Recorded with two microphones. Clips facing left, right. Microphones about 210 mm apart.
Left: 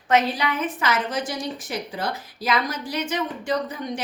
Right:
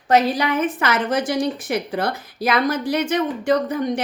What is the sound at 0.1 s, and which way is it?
A woman's voice, 40° right (ahead or behind).